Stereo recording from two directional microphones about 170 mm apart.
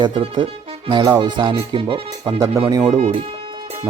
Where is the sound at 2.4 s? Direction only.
20° right (ahead or behind).